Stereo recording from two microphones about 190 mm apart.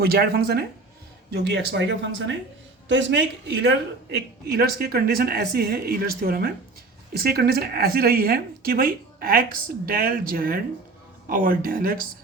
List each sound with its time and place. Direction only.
0.0 s a man's voice: 55° right (ahead or behind)